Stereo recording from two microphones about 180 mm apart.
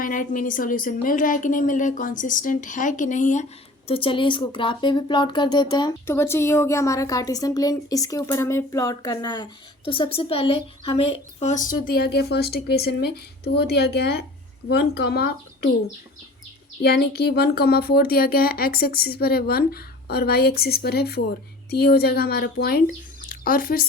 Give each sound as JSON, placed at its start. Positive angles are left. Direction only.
{"t": 0.0, "sound": "a woman's voice", "side_deg": 50}
{"t": 3.8, "sound": "a woman's voice", "side_deg": 30}
{"t": 6.1, "sound": "a woman's voice", "side_deg": 15}
{"t": 16.8, "sound": "speech", "side_deg": 60}